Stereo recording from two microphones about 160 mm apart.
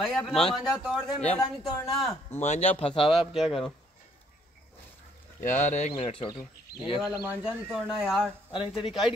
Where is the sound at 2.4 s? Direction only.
45° left (ahead or behind).